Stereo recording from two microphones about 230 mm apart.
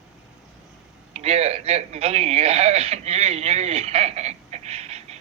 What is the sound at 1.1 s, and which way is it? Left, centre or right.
A man's voice, right.